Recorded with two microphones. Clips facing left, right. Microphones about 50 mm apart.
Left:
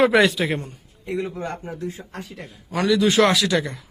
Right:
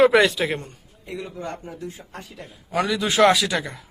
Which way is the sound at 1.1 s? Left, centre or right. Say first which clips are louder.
Left 5 dB; left.